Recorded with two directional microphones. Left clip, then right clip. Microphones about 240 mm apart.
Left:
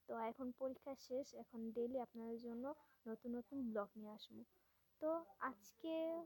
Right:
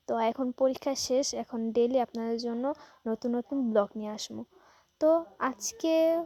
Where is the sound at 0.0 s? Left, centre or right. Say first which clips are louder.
Right 18 dB; right.